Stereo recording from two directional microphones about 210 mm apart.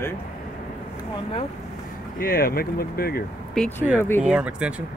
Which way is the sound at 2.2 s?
45° left (ahead or behind).